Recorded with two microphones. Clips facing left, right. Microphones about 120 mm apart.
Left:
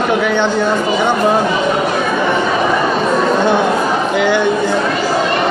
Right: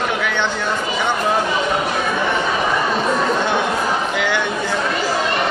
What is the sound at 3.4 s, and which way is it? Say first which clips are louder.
Chatter: left 6 dB; 35° left (ahead or behind).